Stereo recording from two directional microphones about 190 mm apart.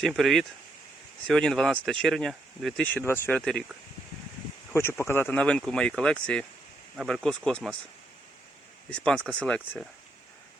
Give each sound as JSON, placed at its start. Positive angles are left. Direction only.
{"t": 0.0, "sound": "speech", "side_deg": 0}
{"t": 4.7, "sound": "speech", "side_deg": 15}
{"t": 8.9, "sound": "speech", "side_deg": 5}